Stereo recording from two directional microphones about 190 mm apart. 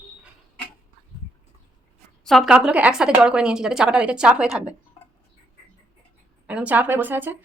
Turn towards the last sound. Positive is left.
turn(degrees=-10)  # may be behind; listen again after turning